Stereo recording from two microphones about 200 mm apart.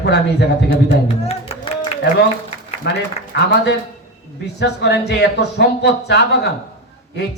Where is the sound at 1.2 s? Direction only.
30° left (ahead or behind).